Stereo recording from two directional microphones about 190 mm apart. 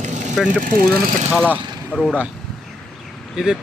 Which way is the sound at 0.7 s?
50° right (ahead or behind).